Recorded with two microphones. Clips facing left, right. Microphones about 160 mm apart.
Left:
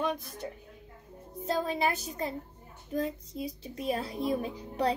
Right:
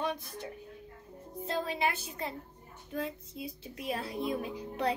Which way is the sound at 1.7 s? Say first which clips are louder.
Left 3 dB; 40° left (ahead or behind).